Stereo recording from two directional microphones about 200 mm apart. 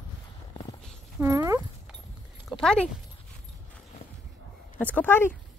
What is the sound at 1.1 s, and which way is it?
Speech, 15° right (ahead or behind).